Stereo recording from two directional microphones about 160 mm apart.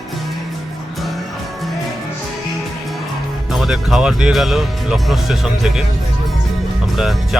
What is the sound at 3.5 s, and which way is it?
Speech, centre (ahead or behind).